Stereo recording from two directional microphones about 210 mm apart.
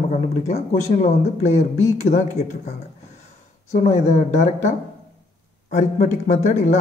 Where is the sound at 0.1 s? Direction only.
35° left (ahead or behind).